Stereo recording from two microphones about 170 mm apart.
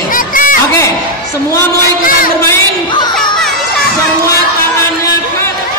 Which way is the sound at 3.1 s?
5° left (ahead or behind).